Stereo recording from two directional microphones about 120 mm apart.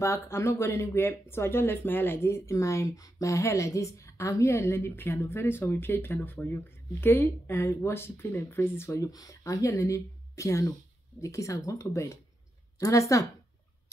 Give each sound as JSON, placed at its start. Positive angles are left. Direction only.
{"t": 0.0, "sound": "speech", "side_deg": 25}